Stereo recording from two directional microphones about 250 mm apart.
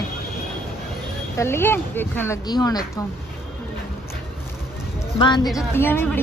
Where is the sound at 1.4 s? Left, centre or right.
Centre.